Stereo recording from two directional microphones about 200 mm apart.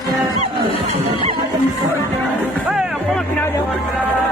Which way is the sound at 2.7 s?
5° right (ahead or behind).